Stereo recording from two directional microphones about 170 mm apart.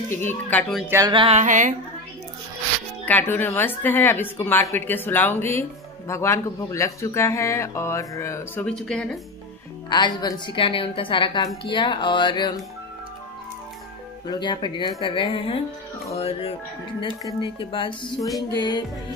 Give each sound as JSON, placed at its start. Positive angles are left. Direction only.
{"t": 0.1, "sound": "a woman's voice", "side_deg": 10}
{"t": 0.8, "sound": "a sound", "side_deg": -20}
{"t": 1.1, "sound": "music", "side_deg": -40}
{"t": 3.1, "sound": "a woman's voice", "side_deg": 10}
{"t": 8.6, "sound": "speech", "side_deg": 5}
{"t": 9.8, "sound": "a woman's voice", "side_deg": 25}
{"t": 14.2, "sound": "a woman's voice", "side_deg": 25}